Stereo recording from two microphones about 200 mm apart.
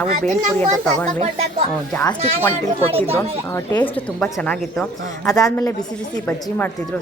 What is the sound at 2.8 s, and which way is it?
Speech, 30° right (ahead or behind).